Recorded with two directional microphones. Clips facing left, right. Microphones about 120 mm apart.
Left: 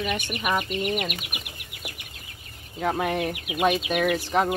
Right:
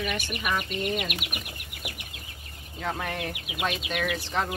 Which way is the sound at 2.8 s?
15° left (ahead or behind).